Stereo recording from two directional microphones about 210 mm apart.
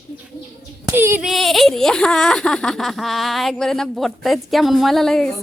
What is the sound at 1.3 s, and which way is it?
Speech, centre (ahead or behind).